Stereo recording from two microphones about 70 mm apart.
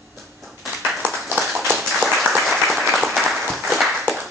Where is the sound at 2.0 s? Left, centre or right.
Centre.